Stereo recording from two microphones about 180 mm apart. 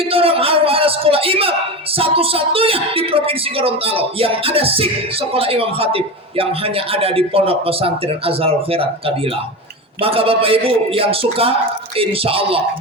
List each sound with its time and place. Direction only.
0.0 s a man's voice: 30° right (ahead or behind)